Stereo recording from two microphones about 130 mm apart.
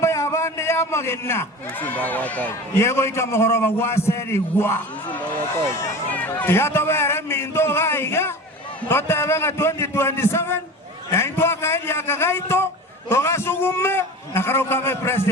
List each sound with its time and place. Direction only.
0.0 s a man's voice: 20° left (ahead or behind)